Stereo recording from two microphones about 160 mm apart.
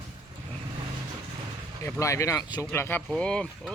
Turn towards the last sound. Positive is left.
turn(degrees=5)  # may be behind; listen again after turning